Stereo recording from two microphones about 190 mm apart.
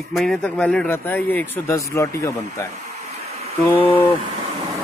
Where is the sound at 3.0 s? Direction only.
35° right (ahead or behind).